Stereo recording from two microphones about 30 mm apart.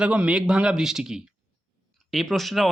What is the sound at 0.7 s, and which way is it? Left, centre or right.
Speech, centre.